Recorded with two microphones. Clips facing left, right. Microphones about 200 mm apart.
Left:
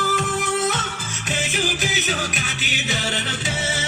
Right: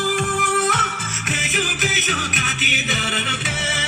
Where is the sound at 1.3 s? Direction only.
35° left (ahead or behind).